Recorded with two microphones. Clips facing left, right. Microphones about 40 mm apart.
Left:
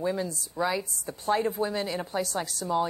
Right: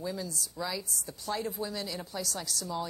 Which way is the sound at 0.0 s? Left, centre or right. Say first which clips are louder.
Left 7 dB; left.